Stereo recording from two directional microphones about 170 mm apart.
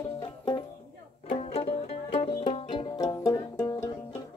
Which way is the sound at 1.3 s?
35° left (ahead or behind).